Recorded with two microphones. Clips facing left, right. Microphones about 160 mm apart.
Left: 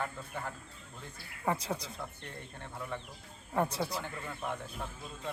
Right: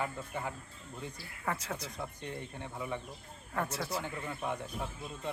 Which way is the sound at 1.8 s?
10° right (ahead or behind).